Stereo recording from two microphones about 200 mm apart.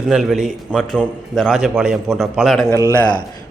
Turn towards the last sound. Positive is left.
turn(degrees=15)  # may be behind; listen again after turning